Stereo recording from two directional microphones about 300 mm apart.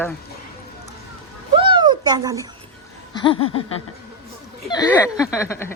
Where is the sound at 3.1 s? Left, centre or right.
Centre.